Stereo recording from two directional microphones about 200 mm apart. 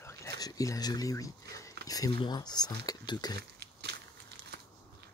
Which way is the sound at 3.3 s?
55° right (ahead or behind).